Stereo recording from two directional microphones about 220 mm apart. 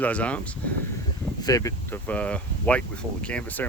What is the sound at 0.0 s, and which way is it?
Speech, 5° left (ahead or behind).